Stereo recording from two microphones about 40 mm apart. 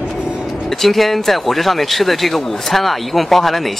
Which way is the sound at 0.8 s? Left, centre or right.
Centre.